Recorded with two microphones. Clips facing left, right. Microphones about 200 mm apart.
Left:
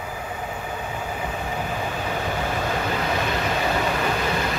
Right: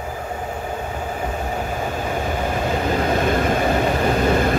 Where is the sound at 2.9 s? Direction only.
50° right (ahead or behind).